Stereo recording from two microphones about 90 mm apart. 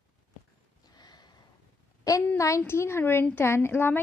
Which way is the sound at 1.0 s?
50° left (ahead or behind).